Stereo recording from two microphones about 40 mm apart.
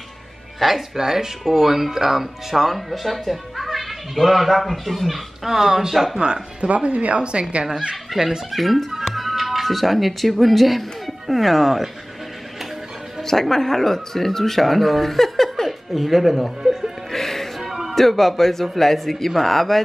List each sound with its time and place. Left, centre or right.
0.6 s speech: centre
6.1 s speech: right
6.7 s speech: right
7.9 s speech: centre
13.2 s speech: centre
17.1 s music: centre
17.6 s music: centre
17.9 s speech: centre